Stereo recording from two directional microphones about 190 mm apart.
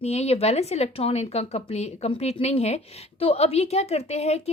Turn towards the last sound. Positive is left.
turn(degrees=35)  # may be behind; listen again after turning